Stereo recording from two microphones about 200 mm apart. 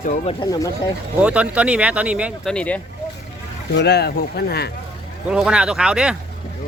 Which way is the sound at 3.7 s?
55° left (ahead or behind).